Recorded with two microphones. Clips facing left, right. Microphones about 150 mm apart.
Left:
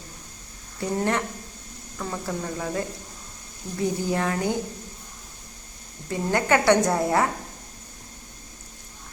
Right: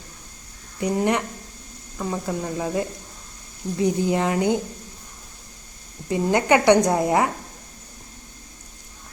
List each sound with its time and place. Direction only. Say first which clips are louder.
0.8 s a woman's voice: right 3 dB; 15° right (ahead or behind)
6.1 s a woman's voice: right 4 dB; 20° right (ahead or behind)